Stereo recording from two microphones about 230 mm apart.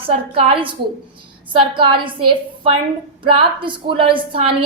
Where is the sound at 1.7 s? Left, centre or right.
Right.